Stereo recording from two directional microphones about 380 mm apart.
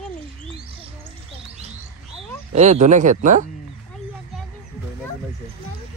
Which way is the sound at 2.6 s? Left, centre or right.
Centre.